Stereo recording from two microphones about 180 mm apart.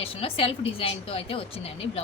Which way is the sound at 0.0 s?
30° left (ahead or behind).